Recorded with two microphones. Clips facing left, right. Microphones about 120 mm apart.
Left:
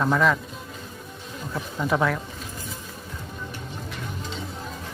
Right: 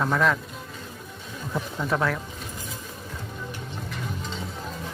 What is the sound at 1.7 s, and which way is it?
Speech, centre (ahead or behind).